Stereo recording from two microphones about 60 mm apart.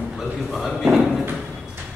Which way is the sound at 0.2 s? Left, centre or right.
Centre.